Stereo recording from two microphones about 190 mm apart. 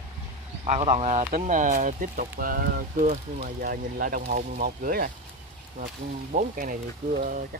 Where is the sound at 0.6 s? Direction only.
40° right (ahead or behind).